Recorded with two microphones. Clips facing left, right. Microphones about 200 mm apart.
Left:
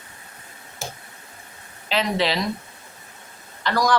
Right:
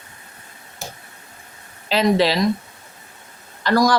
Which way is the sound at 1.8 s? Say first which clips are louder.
Right 6 dB; 35° right (ahead or behind).